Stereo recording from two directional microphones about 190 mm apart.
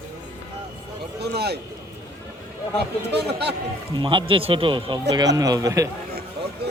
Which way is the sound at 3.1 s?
60° right (ahead or behind).